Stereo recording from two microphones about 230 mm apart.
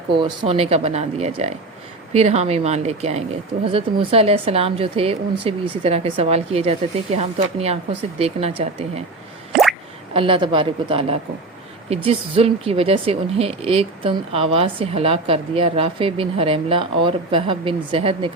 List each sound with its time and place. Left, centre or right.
0.1 s speech: right
9.5 s drip: centre
10.2 s speech: right